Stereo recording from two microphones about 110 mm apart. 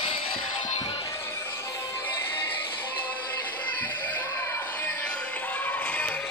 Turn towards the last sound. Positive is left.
turn(degrees=15)  # may be behind; listen again after turning